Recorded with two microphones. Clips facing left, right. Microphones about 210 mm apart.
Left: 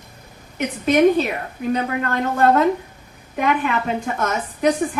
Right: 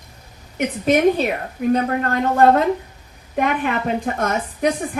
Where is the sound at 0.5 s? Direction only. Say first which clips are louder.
Left 1 dB; 50° right (ahead or behind).